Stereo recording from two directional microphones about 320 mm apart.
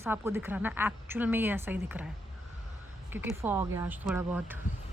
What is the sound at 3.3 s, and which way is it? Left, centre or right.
A woman's voice, centre.